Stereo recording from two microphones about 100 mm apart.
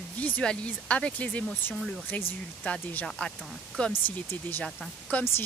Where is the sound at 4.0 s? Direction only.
20° left (ahead or behind).